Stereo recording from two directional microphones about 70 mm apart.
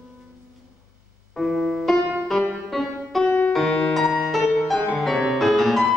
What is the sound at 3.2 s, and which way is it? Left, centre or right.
Music, left.